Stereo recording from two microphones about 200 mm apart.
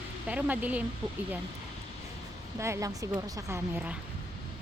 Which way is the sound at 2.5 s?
15° right (ahead or behind).